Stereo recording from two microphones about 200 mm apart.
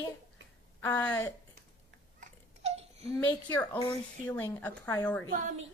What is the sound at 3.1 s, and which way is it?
A woman's voice, 15° left (ahead or behind).